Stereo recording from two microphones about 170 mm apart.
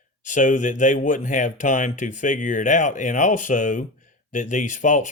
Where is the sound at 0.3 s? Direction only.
45° left (ahead or behind).